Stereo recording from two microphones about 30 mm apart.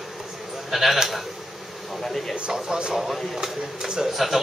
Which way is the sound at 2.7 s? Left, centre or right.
Right.